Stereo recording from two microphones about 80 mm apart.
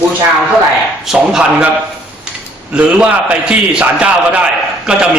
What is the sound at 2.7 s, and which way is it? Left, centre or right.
A man's voice, centre.